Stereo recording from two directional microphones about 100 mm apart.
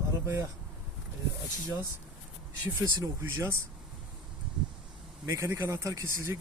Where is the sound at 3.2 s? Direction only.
25° right (ahead or behind).